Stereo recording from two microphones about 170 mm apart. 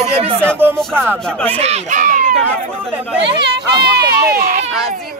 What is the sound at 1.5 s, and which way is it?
Speech, 40° right (ahead or behind).